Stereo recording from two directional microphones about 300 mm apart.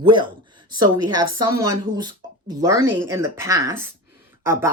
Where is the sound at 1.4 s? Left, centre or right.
Centre.